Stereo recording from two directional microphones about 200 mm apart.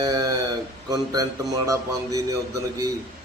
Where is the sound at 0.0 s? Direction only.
20° right (ahead or behind).